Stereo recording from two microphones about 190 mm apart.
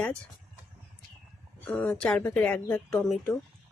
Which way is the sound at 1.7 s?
5° left (ahead or behind).